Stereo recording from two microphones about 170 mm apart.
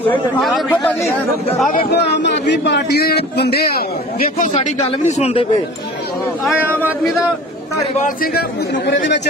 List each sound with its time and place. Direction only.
0.4 s a man's voice: 5° left (ahead or behind)
1.7 s a man's voice: 65° left (ahead or behind)
4.5 s speech: 40° left (ahead or behind)
6.4 s speech: 5° right (ahead or behind)
7.9 s a man's voice: 55° left (ahead or behind); by 9.2 s 90° left